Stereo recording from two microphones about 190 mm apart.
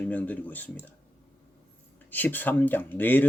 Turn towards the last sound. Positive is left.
turn(degrees=10)  # may be behind; listen again after turning